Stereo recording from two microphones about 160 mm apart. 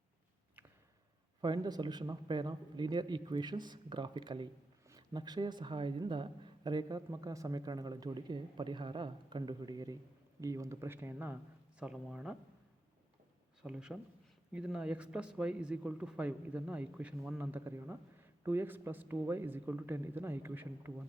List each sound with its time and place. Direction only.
1.4 s speech: 25° right (ahead or behind); by 12.4 s 5° right (ahead or behind)
13.6 s speech: 5° right (ahead or behind)